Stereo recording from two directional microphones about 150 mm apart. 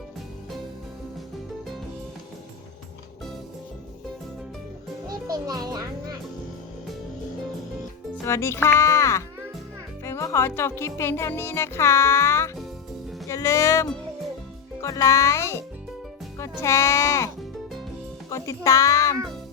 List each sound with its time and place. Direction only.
5.0 s music: 25° right (ahead or behind)
8.2 s a child's voice: 20° left (ahead or behind)